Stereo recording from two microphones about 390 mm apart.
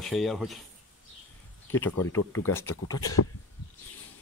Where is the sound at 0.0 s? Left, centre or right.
Centre.